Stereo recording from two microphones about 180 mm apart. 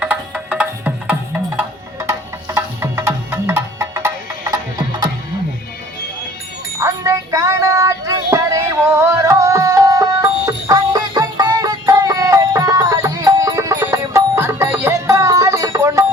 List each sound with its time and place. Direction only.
0.0 s music: 5° right (ahead or behind); by 5.0 s 20° right (ahead or behind)
6.7 s music: 15° right (ahead or behind)